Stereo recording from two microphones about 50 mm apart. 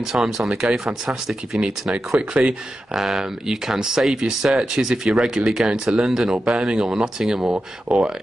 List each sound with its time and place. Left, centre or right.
0.0 s speech: centre
2.1 s speech: right
2.9 s speech: centre
7.4 s speech: right